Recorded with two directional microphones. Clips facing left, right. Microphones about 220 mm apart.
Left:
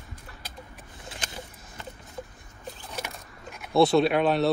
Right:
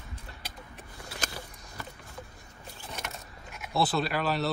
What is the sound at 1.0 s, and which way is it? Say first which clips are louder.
Vehicle: even; 20° left (ahead or behind).